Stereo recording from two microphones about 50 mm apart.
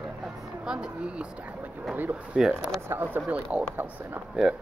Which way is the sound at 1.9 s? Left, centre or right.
Right.